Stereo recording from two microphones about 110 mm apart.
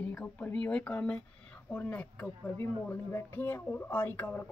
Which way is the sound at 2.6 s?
25° left (ahead or behind).